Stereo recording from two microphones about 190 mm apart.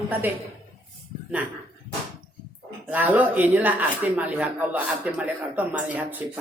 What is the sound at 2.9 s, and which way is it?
Speech, 10° right (ahead or behind).